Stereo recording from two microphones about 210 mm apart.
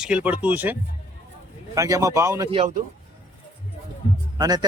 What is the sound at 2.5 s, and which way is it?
Speech, 25° right (ahead or behind).